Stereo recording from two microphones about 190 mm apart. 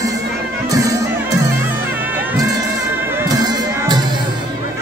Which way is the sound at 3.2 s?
20° right (ahead or behind).